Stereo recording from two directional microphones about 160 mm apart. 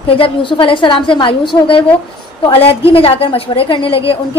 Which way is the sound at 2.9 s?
35° left (ahead or behind).